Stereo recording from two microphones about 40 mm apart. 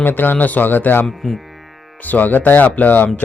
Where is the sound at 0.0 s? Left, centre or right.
Left.